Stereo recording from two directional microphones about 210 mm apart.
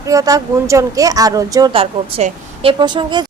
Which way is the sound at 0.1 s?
15° right (ahead or behind).